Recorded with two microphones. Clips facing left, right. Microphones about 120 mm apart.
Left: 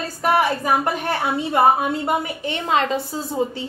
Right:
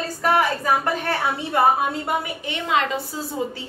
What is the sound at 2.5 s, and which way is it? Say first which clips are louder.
Speech: left 2 dB; 35° left (ahead or behind).